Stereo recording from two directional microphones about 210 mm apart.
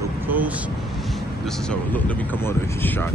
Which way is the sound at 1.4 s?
5° left (ahead or behind).